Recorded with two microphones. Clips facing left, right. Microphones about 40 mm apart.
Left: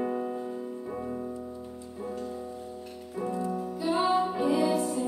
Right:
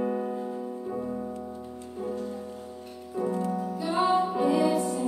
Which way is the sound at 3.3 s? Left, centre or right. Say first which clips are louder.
Right 1 dB; right.